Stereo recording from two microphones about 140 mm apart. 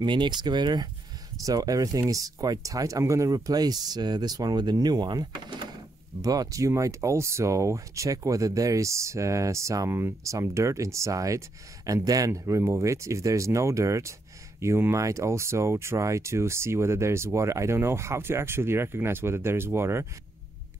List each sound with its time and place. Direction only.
0.0 s speech: 35° right (ahead or behind); by 20.1 s 20° right (ahead or behind)